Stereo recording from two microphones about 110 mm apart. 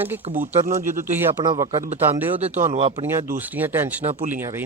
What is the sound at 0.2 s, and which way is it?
Speech, 70° right (ahead or behind).